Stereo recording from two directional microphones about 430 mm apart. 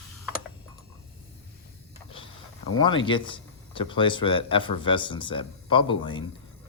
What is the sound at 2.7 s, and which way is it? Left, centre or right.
Speech, centre.